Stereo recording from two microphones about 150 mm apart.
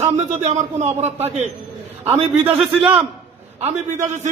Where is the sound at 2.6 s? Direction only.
Centre (ahead or behind).